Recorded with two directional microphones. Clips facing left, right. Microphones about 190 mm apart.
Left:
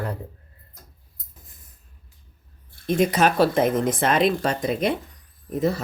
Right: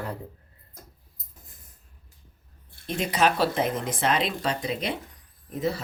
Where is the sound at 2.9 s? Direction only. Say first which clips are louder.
Left 5 dB; 50° left (ahead or behind).